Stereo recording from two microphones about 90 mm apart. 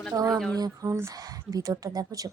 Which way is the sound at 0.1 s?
45° right (ahead or behind).